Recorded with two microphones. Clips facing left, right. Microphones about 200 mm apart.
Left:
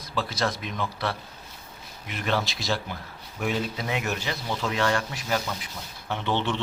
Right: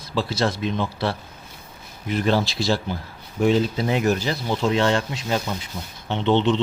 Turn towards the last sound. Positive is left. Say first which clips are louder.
# right 8 dB
turn(degrees=-20)  # may be behind; listen again after turning